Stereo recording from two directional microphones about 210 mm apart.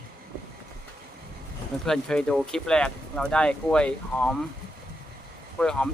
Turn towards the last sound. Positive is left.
turn(degrees=5)  # may be behind; listen again after turning